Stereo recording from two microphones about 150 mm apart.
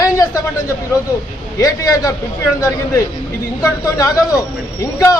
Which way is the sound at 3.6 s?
25° left (ahead or behind).